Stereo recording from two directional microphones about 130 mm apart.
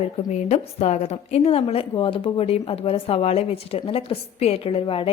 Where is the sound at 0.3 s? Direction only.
60° left (ahead or behind).